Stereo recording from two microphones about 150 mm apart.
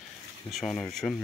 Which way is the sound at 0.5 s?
5° left (ahead or behind).